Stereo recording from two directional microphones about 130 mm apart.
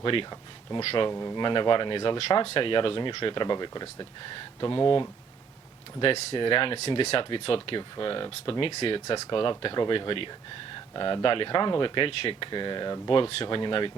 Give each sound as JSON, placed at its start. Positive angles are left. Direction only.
{"t": 0.0, "sound": "speech", "side_deg": 40}
{"t": 1.1, "sound": "speech", "side_deg": 30}